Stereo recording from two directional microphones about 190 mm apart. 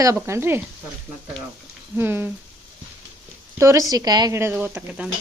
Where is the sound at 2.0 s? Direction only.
10° right (ahead or behind).